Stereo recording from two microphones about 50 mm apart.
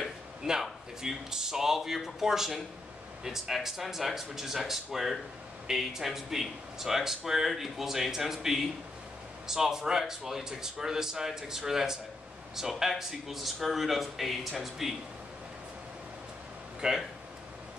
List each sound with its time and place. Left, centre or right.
0.5 s speech: centre
16.8 s speech: centre